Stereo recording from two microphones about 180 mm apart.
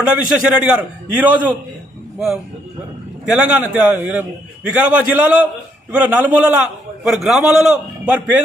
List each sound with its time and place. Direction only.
0.0 s a man's voice: 5° right (ahead or behind)